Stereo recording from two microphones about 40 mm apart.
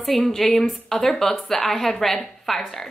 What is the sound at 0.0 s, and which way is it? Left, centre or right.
A woman's voice, centre.